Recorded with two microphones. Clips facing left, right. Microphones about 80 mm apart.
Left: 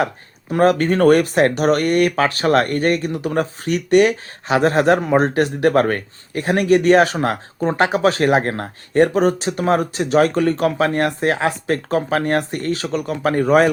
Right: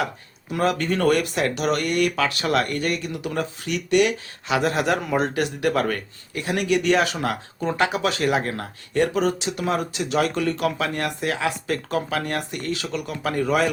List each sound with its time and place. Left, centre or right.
0.5 s speech: left